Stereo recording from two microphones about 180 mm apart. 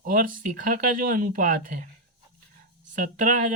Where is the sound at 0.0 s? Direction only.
50° right (ahead or behind).